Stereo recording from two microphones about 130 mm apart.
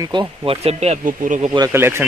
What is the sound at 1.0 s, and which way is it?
Speech, 85° right.